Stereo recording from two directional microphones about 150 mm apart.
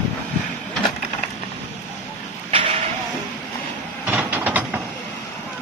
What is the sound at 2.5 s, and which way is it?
Vehicle, 40° right (ahead or behind).